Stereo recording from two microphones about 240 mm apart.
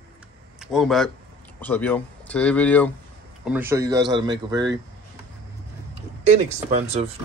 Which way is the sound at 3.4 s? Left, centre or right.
Centre.